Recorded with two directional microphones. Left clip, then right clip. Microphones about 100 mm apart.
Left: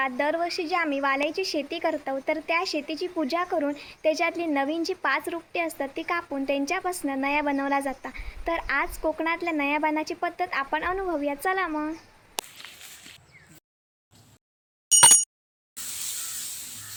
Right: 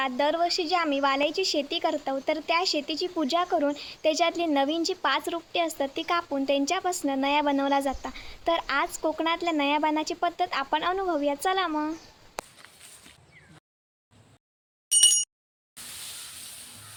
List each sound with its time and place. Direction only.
0.2 s a woman's voice: 20° right (ahead or behind)